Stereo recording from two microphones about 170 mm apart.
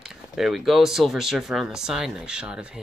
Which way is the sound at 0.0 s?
Centre (ahead or behind).